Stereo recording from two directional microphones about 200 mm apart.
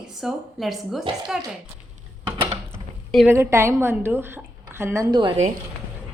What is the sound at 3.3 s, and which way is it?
A woman's voice, 15° right (ahead or behind).